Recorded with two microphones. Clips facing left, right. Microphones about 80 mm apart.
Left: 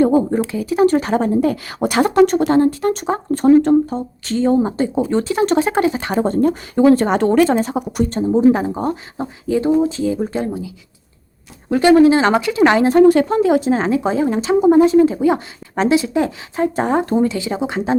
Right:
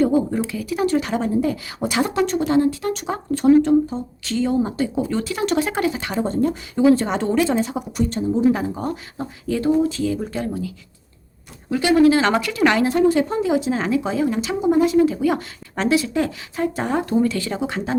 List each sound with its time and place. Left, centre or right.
0.0 s a woman's voice: left
6.1 s speech: left
8.5 s a woman's voice: left
9.5 s speech: left
11.7 s speech: left
13.1 s speech: left
13.5 s a woman's voice: left
17.2 s speech: centre